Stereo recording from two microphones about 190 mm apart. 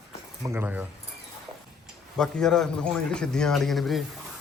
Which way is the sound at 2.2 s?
5° left (ahead or behind).